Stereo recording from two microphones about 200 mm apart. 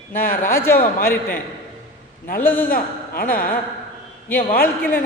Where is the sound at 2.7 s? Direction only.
45° left (ahead or behind).